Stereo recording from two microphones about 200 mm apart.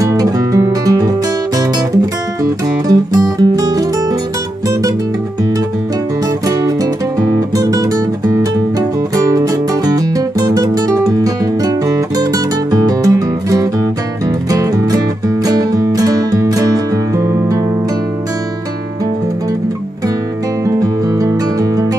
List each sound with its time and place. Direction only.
0.0 s music: 15° right (ahead or behind)
2.9 s music: 20° right (ahead or behind)
7.3 s guitar: 15° right (ahead or behind)
9.1 s music: 15° right (ahead or behind)
20.6 s music: 15° right (ahead or behind)